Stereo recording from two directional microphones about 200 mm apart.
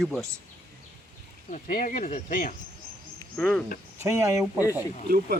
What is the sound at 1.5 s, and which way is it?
Speech, 40° left (ahead or behind).